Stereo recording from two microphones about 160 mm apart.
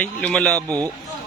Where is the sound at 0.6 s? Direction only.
20° right (ahead or behind).